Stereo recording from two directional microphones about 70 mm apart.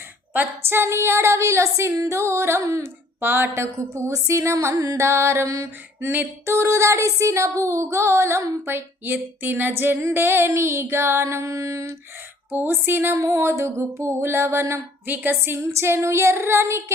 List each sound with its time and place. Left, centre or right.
0.3 s a woman's voice: right
3.2 s a woman's voice: right
6.1 s a sound: right
10.0 s a woman's voice: right
12.5 s a woman's voice: right
13.1 s a woman's voice: right